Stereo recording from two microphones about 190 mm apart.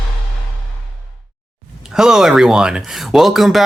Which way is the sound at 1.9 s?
5° right (ahead or behind).